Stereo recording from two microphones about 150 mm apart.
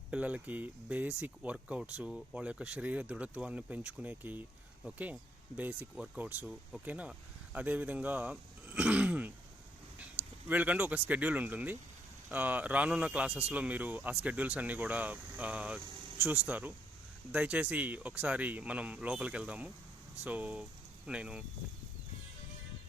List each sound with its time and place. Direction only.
0.1 s speech: 10° right (ahead or behind)
10.5 s speech: 10° right (ahead or behind)